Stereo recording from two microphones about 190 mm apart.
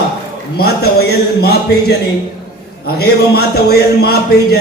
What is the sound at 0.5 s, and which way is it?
Speech, 55° left (ahead or behind).